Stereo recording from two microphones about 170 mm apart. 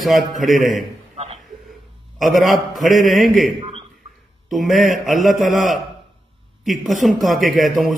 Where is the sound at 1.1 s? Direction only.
35° right (ahead or behind).